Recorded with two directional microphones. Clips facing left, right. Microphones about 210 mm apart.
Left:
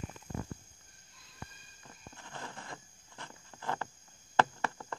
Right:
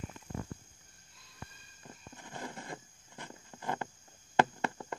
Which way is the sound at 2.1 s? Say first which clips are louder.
Right 3 dB; 15° right (ahead or behind).